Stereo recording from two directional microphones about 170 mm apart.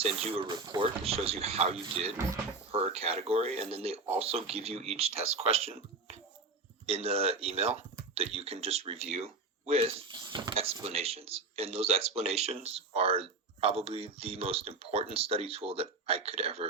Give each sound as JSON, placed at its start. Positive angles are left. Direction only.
{"t": 0.0, "sound": "speech", "side_deg": -35}
{"t": 0.6, "sound": "speech", "side_deg": -20}
{"t": 1.0, "sound": "speech", "side_deg": -35}